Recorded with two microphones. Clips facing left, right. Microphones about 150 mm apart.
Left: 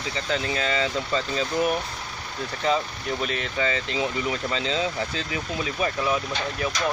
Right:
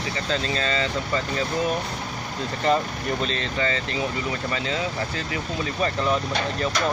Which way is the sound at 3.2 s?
15° left (ahead or behind).